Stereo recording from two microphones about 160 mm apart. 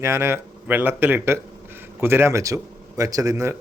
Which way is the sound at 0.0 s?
15° right (ahead or behind).